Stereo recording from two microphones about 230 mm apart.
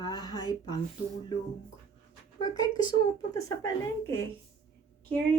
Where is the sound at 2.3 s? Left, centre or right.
Centre.